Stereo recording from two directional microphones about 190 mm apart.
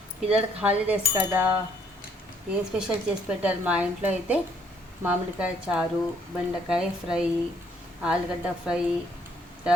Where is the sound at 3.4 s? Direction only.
5° right (ahead or behind).